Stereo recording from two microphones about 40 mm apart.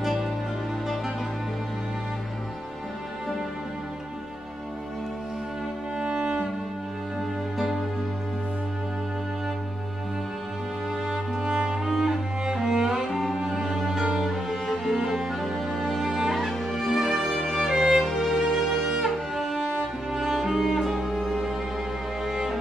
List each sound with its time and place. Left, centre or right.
0.0 s music: centre
5.9 s music: right
7.5 s music: centre
11.1 s music: centre
18.5 s music: centre
22.2 s music: centre